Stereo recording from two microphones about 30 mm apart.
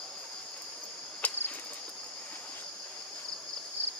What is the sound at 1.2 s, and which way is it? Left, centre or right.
Cricket, left.